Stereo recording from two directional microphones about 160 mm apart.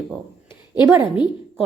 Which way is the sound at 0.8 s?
15° right (ahead or behind).